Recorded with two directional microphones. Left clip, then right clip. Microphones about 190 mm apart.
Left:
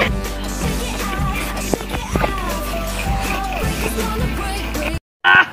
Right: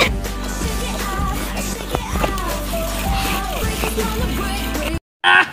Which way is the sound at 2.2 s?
Centre (ahead or behind).